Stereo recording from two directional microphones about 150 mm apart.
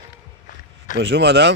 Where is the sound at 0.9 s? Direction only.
60° left (ahead or behind).